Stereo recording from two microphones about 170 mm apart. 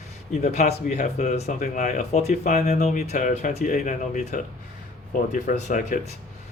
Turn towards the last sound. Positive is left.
turn(degrees=50)  # may be behind; listen again after turning